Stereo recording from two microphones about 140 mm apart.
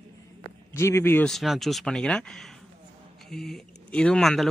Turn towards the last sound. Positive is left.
turn(degrees=0)  # may be behind; listen again after turning